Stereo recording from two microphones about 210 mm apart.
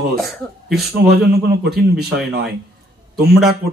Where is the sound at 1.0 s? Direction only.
50° right (ahead or behind).